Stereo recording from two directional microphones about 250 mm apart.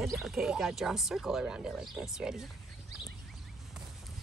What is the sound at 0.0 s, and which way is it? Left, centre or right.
Speech, centre.